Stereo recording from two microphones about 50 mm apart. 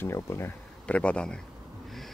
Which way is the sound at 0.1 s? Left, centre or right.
Left.